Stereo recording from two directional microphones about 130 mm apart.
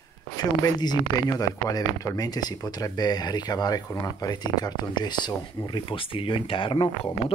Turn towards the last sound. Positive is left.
turn(degrees=40)  # may be behind; listen again after turning